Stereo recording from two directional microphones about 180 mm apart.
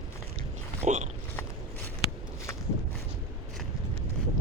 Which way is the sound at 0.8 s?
40° right (ahead or behind).